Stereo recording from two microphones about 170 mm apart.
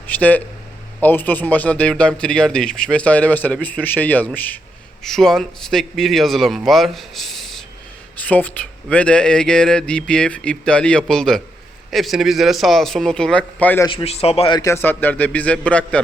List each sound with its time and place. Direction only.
0.1 s a man's voice: 10° left (ahead or behind)
13.8 s speech: 35° left (ahead or behind)
14.6 s a man's voice: 15° left (ahead or behind)